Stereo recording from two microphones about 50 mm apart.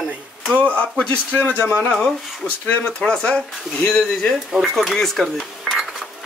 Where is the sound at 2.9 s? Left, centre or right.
Centre.